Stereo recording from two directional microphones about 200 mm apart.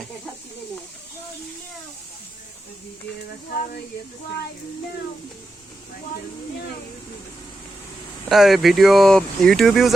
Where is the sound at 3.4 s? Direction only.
50° left (ahead or behind).